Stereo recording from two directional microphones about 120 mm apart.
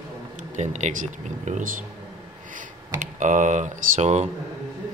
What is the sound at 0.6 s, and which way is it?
Speech, 80° right.